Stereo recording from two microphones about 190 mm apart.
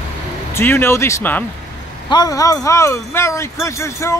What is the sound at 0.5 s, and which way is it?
Speech, 15° left (ahead or behind).